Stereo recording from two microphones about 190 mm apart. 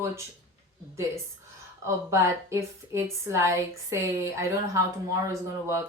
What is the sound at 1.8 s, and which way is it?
Speech, 15° right (ahead or behind).